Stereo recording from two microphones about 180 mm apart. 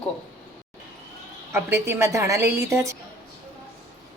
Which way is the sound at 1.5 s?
15° right (ahead or behind).